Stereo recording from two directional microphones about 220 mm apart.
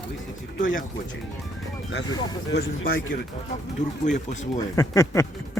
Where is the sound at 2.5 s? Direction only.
45° left (ahead or behind).